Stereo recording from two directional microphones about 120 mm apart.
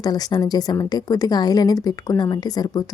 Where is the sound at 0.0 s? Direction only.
35° left (ahead or behind).